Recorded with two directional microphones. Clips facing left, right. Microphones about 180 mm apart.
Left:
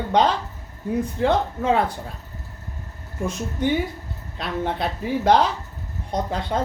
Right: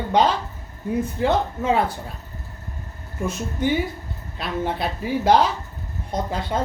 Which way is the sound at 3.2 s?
5° right (ahead or behind).